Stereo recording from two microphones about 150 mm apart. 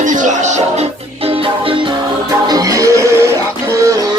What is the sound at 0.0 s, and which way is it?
Music, 60° right (ahead or behind).